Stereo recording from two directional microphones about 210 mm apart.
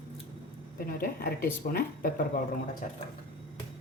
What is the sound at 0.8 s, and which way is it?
A woman's voice, 45° left (ahead or behind).